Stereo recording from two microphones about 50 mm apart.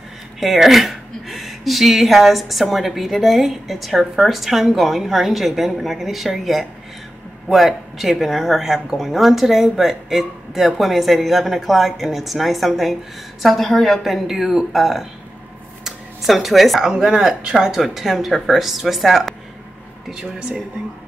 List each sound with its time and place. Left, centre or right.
0.4 s speech: centre
16.9 s speech: centre
20.1 s speech: centre